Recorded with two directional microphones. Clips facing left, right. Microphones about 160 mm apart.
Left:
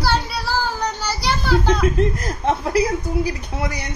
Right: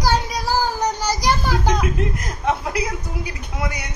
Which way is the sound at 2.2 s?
30° left (ahead or behind).